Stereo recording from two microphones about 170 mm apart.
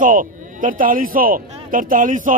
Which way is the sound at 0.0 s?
50° right (ahead or behind).